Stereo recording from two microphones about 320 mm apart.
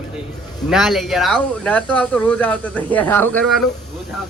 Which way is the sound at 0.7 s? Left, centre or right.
Centre.